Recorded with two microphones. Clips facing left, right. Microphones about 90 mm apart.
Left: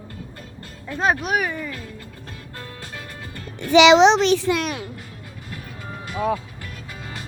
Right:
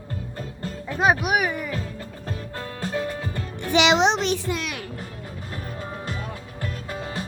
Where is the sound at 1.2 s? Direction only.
10° right (ahead or behind).